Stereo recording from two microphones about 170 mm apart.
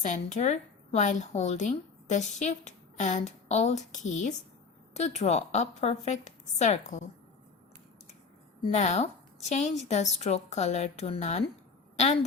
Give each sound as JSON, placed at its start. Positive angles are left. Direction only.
{"t": 0.0, "sound": "a woman's voice", "side_deg": 45}
{"t": 8.7, "sound": "a woman's voice", "side_deg": 40}